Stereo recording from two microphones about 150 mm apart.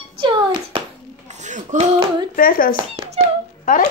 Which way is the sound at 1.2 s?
50° right (ahead or behind).